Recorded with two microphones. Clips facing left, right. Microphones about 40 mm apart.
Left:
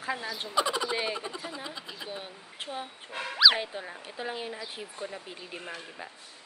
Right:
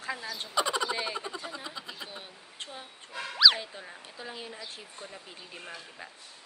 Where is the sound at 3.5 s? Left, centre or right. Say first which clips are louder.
Left 5 dB; left.